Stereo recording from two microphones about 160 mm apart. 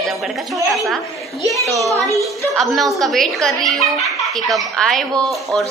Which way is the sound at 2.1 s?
Centre (ahead or behind).